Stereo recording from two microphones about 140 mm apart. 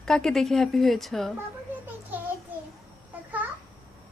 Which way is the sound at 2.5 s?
10° right (ahead or behind).